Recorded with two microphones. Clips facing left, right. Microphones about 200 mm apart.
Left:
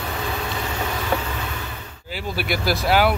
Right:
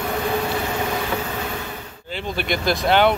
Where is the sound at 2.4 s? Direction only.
5° left (ahead or behind).